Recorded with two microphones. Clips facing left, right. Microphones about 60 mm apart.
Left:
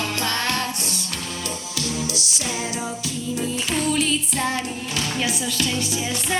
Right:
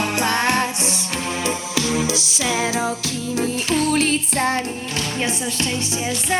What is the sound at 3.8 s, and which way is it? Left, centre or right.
Music, right.